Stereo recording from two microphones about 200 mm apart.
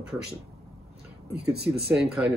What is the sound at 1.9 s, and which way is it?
Speech, 5° right (ahead or behind).